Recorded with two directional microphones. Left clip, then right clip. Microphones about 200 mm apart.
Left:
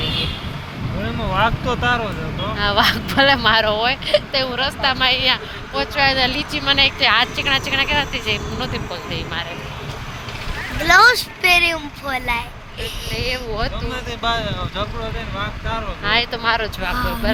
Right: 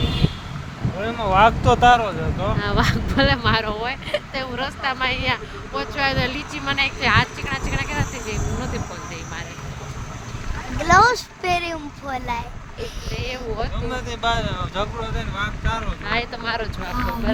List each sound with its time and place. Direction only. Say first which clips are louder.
1.0 s a sound: right 3 dB; 60° right (ahead or behind)
2.6 s speech: left 9 dB; 5° right (ahead or behind)
10.8 s a child's voice: left 3 dB; 15° right (ahead or behind)
13.9 s speech: even; 60° right (ahead or behind)
16.0 s speech: left 7 dB; centre (ahead or behind)